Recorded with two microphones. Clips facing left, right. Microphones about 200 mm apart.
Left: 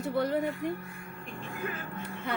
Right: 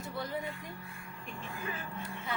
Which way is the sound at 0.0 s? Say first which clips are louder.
Left 9 dB; 65° left (ahead or behind).